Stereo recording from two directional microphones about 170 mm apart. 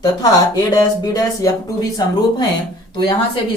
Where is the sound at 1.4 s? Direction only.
20° left (ahead or behind).